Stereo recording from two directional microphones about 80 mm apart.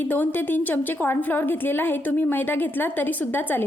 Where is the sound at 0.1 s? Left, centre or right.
Left.